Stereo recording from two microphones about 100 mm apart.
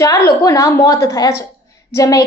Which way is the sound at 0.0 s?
30° left (ahead or behind).